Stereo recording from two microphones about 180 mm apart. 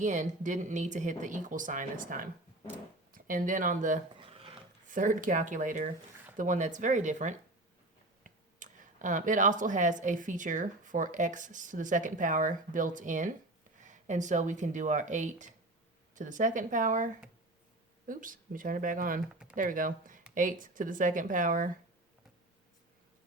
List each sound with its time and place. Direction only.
0.0 s speech: 45° right (ahead or behind)
4.2 s a sound: 30° right (ahead or behind)
4.9 s speech: 45° right (ahead or behind)